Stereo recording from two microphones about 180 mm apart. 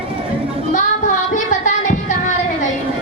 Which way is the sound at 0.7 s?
45° left (ahead or behind).